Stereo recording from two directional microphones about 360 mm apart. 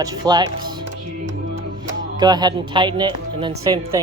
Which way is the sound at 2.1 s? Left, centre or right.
Centre.